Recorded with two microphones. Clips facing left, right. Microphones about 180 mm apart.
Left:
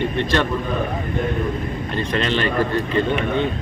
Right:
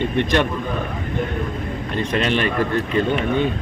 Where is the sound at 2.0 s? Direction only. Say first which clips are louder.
Right 1 dB; 15° right (ahead or behind).